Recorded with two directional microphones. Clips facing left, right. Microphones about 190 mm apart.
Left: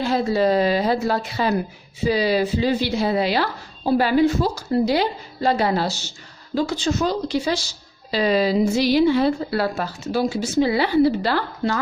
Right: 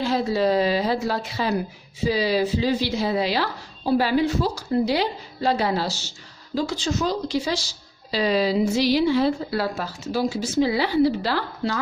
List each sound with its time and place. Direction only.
0.0 s a woman's voice: 50° left (ahead or behind)